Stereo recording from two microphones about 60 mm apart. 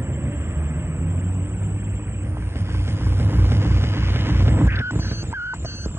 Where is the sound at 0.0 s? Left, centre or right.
Right.